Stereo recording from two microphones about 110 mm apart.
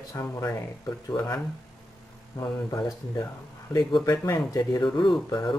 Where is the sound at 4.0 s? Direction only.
25° left (ahead or behind).